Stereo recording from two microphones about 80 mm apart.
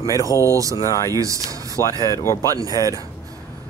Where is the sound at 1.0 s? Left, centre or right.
Right.